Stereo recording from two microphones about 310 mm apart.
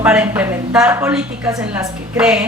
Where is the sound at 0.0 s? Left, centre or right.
Centre.